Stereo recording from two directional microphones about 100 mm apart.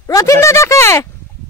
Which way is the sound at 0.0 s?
30° left (ahead or behind).